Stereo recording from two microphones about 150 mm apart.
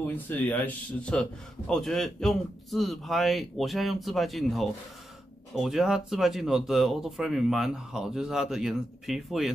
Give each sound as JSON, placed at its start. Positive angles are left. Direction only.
{"t": 0.0, "sound": "speech", "side_deg": 10}